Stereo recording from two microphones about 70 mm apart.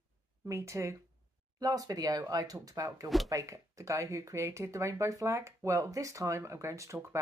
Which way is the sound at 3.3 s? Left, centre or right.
Right.